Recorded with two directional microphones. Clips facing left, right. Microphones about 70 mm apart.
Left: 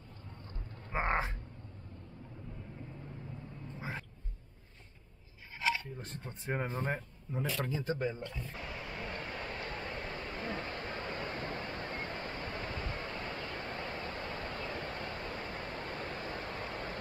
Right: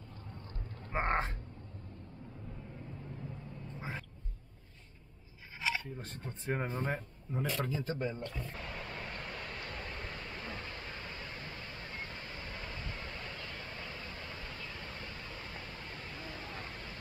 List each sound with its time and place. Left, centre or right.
1.0 s a sound: centre
5.9 s speech: centre
8.5 s vehicle: centre; by 16.9 s left